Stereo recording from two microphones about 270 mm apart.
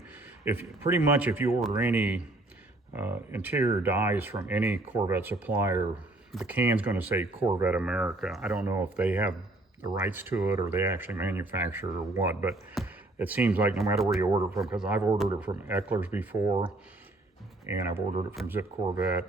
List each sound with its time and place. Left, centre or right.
0.1 s speech: centre
14.2 s speech: centre
17.7 s speech: centre